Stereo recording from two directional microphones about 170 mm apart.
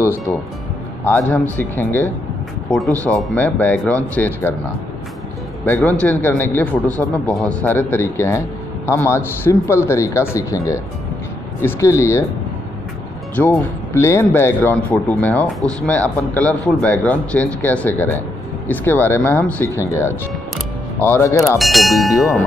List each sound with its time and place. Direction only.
1.1 s speech: 10° left (ahead or behind)
5.8 s speech: 10° left (ahead or behind)
13.4 s speech: 15° left (ahead or behind)
21.4 s speech: centre (ahead or behind)